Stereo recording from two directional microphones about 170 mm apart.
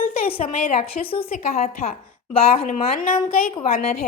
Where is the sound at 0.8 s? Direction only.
35° left (ahead or behind).